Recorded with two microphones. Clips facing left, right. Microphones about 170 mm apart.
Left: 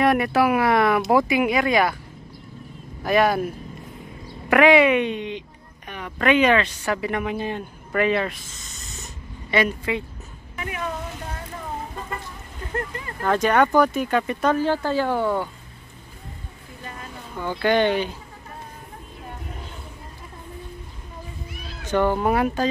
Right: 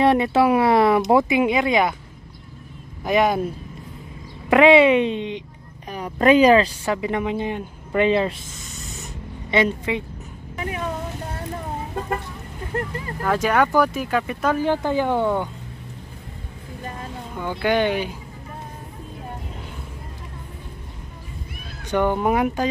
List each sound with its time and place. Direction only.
0.0 s speech: 25° right (ahead or behind)
3.0 s speech: 15° right (ahead or behind)
5.9 s speech: 35° right (ahead or behind)
9.5 s speech: 25° right (ahead or behind)
10.5 s vehicle: 30° right (ahead or behind)
13.2 s speech: 5° right (ahead or behind)
14.6 s speech: 15° right (ahead or behind)
17.4 s speech: 10° right (ahead or behind)
21.8 s speech: 15° right (ahead or behind)